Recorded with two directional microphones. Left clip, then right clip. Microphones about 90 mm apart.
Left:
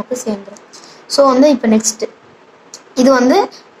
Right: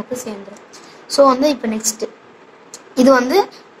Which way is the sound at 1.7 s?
40° left (ahead or behind).